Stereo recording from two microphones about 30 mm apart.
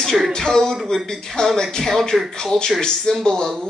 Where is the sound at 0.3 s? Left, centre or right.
Centre.